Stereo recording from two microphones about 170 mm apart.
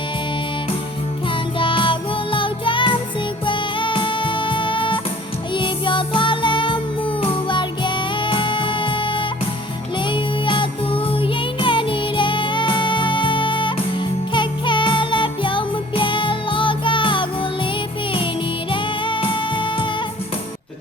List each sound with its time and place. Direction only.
1.5 s music: 30° left (ahead or behind)
18.7 s music: 30° left (ahead or behind)